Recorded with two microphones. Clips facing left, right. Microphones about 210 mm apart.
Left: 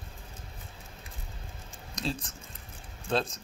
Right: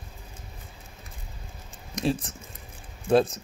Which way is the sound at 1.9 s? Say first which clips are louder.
Right 8 dB; 25° right (ahead or behind).